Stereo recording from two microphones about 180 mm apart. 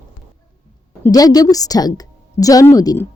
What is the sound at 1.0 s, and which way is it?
A woman's voice, 20° left (ahead or behind).